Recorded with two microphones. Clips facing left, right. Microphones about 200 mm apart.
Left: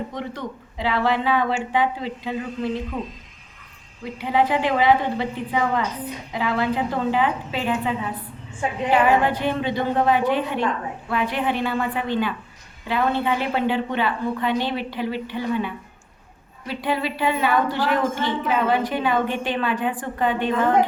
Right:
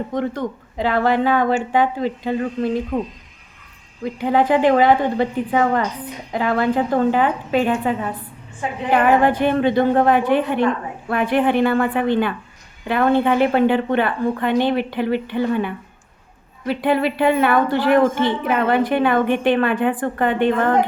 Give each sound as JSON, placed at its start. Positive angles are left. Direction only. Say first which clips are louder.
{"t": 0.1, "sound": "speech", "louder": "right 8 dB", "side_deg": -50}
{"t": 4.2, "sound": "a woman's voice", "louder": "right 5 dB", "side_deg": -50}